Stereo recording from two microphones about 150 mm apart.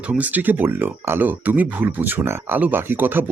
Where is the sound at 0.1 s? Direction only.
10° right (ahead or behind).